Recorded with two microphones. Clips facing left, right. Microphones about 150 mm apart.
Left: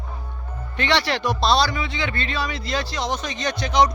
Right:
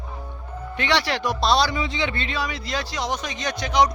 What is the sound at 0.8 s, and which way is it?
A man's voice, 10° right (ahead or behind).